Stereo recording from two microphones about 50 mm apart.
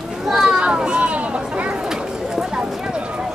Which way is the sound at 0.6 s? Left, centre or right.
Centre.